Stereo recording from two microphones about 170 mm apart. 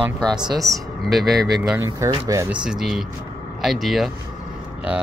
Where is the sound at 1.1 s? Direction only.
Centre (ahead or behind).